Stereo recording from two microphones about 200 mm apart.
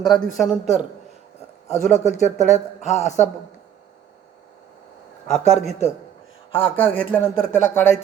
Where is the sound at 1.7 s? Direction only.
35° left (ahead or behind).